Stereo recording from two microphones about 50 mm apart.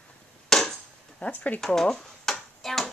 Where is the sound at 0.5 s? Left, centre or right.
Centre.